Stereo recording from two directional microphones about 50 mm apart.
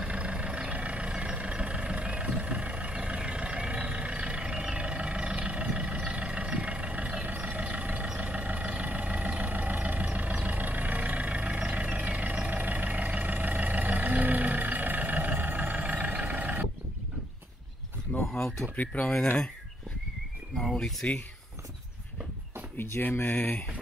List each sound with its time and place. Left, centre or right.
0.0 s vehicle: right
18.2 s a sound: centre
18.8 s speech: left
20.7 s speech: centre
22.8 s speech: left
23.2 s speech: left